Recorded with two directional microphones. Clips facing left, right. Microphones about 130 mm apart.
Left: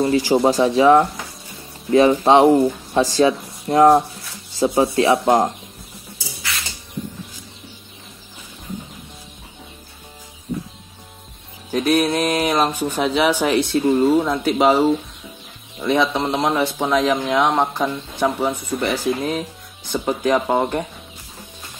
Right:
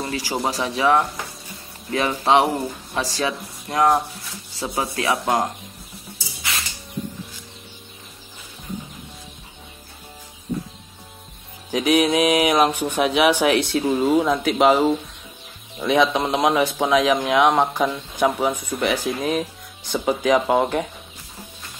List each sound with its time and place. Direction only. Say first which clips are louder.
0.0 s speech: left 9 dB; 30° left (ahead or behind)
11.7 s speech: even; 10° right (ahead or behind)